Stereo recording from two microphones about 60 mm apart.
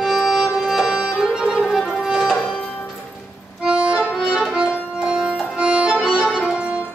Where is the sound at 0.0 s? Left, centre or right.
Centre.